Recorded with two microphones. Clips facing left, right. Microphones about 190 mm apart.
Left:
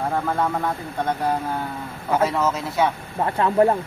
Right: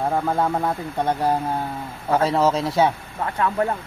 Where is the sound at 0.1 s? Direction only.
15° right (ahead or behind).